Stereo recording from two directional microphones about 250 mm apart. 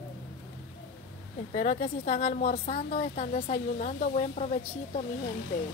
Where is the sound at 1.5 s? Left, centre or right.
Left.